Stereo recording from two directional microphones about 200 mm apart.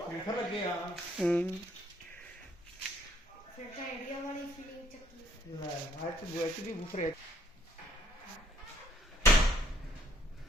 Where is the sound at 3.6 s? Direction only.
40° left (ahead or behind).